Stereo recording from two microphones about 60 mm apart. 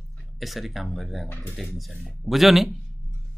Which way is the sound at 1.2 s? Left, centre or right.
Left.